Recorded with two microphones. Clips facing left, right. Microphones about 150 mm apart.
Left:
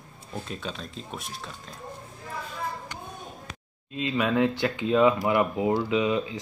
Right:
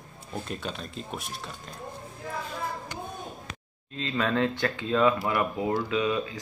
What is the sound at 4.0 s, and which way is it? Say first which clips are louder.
Speech: left 3 dB; 15° left (ahead or behind).